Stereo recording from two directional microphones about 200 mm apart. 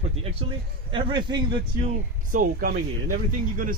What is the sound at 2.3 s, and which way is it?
Speech, 45° right (ahead or behind).